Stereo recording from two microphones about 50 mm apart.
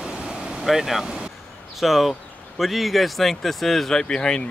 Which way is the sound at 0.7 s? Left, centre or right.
Centre.